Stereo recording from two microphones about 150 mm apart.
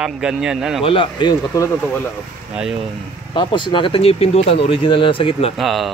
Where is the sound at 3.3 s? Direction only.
35° left (ahead or behind).